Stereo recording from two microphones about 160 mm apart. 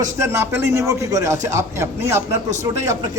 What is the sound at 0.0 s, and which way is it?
A man's voice, 20° right (ahead or behind).